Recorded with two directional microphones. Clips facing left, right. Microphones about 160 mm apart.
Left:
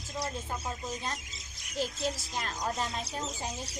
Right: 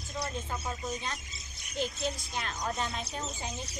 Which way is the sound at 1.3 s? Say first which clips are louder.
Even; 90° left.